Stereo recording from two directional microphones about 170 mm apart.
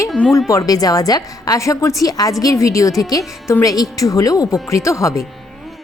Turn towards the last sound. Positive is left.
turn(degrees=20)  # may be behind; listen again after turning